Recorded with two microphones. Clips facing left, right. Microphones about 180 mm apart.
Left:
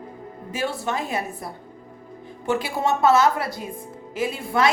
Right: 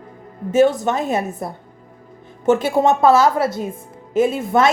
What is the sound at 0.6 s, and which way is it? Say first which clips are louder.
Speech: right 11 dB; 20° right (ahead or behind).